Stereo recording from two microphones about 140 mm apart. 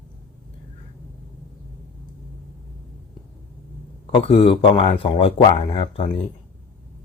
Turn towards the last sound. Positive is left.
turn(degrees=40)  # may be behind; listen again after turning